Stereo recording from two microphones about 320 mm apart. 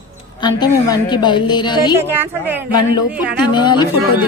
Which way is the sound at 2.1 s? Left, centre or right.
Centre.